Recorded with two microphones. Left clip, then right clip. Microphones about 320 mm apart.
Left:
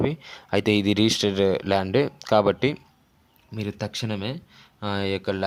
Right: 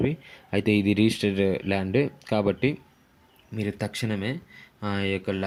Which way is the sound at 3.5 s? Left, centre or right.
Centre.